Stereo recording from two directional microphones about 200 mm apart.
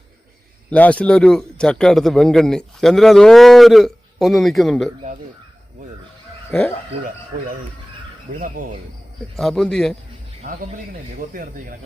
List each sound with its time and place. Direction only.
0.7 s a man's voice: 5° left (ahead or behind)
6.5 s speech: 10° left (ahead or behind)
8.3 s speech: 40° right (ahead or behind)
9.3 s a man's voice: centre (ahead or behind)
11.2 s speech: 45° right (ahead or behind)